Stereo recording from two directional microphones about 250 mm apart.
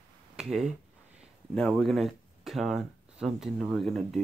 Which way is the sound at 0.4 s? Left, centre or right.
Centre.